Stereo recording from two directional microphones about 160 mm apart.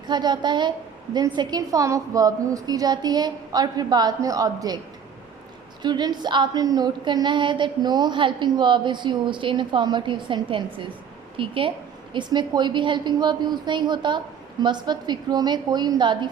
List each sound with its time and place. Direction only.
0.1 s a woman's voice: 25° right (ahead or behind)
5.8 s a woman's voice: 25° right (ahead or behind)